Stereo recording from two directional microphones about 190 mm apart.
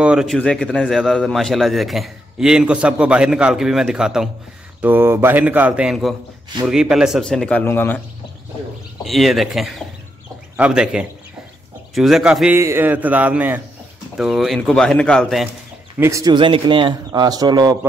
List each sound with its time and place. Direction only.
0.0 s a man's voice: 5° right (ahead or behind)
9.0 s a man's voice: centre (ahead or behind)
16.0 s speech: 15° right (ahead or behind)